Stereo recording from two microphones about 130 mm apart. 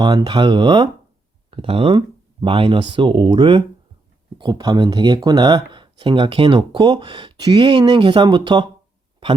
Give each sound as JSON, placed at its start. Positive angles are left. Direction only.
{"t": 0.0, "sound": "speech", "side_deg": -35}